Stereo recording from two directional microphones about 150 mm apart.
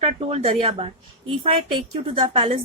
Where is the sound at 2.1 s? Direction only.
35° right (ahead or behind).